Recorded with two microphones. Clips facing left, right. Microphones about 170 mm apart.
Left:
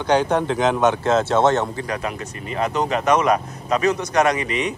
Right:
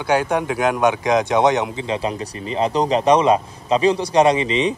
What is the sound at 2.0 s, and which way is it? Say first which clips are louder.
Speech: right 4 dB; 30° right (ahead or behind).